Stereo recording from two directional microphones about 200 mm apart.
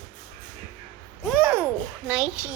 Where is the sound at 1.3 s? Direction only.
5° right (ahead or behind).